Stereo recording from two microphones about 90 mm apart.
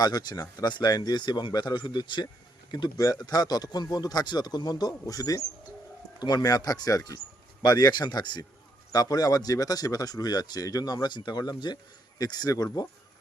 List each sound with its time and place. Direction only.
0.0 s speech: 50° left (ahead or behind)
2.7 s speech: 45° left (ahead or behind)